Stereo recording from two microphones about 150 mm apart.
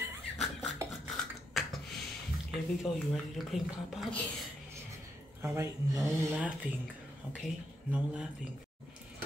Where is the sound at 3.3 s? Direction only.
Centre (ahead or behind).